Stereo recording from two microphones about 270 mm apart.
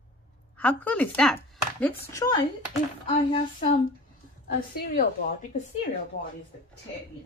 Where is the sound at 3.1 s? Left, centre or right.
Left.